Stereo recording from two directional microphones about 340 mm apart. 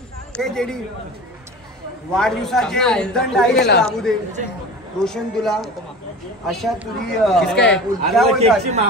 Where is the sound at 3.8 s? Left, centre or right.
Centre.